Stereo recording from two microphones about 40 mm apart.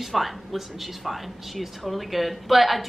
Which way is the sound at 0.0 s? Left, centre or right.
Centre.